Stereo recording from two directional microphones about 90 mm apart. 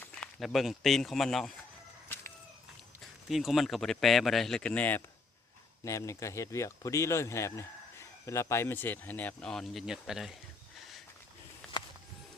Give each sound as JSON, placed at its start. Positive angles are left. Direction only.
{"t": 0.3, "sound": "speech", "side_deg": 0}
{"t": 3.2, "sound": "speech", "side_deg": -5}
{"t": 5.8, "sound": "speech", "side_deg": 35}
{"t": 9.5, "sound": "speech", "side_deg": 5}
{"t": 9.8, "sound": "speech", "side_deg": -5}